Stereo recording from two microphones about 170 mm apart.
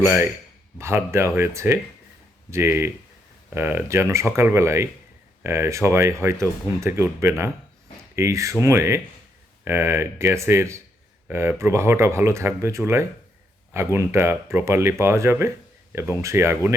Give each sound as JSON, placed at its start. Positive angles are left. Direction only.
{"t": 0.0, "sound": "speech", "side_deg": -15}